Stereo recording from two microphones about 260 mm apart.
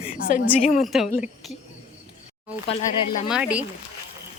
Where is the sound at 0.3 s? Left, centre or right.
Left.